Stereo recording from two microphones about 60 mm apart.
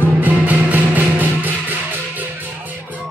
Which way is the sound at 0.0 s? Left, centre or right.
Right.